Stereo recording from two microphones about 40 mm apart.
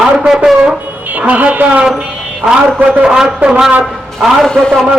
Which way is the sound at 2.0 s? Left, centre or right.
Centre.